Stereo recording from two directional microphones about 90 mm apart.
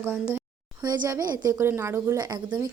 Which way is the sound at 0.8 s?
45° right (ahead or behind).